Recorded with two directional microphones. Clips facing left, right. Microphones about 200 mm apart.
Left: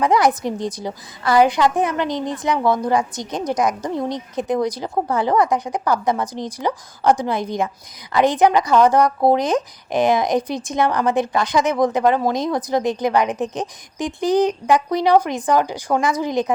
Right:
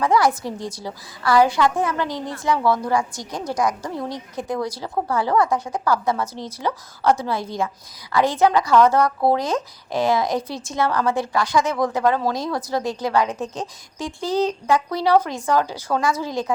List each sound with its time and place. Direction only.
0.0 s a woman's voice: 20° left (ahead or behind)